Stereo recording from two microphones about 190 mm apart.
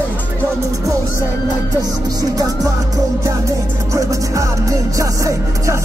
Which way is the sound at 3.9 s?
15° right (ahead or behind).